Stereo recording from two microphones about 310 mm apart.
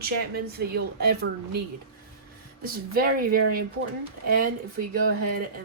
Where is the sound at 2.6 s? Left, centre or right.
Right.